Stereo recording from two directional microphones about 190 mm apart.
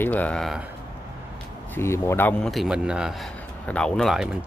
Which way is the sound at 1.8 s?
15° left (ahead or behind).